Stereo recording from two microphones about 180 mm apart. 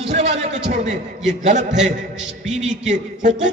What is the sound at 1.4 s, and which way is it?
Speech, 40° right (ahead or behind).